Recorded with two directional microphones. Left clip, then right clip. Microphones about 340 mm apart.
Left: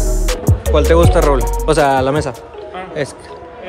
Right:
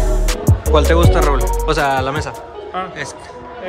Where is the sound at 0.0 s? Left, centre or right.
Centre.